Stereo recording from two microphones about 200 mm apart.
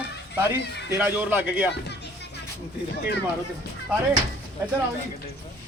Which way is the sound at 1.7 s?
55° left (ahead or behind).